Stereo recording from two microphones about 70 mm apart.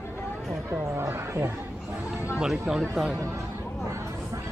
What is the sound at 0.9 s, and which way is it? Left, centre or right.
Speech, right.